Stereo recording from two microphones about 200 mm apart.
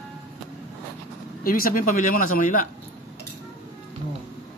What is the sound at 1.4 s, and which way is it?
Speech, 45° left (ahead or behind).